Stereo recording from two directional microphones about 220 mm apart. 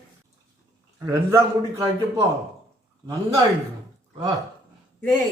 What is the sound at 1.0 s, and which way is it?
A man's voice, 15° right (ahead or behind).